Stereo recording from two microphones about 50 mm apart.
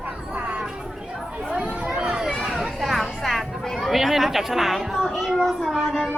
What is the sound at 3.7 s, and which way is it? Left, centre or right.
Speech, centre.